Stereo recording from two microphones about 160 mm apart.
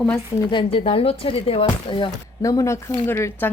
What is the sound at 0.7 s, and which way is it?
Speech, 35° left (ahead or behind).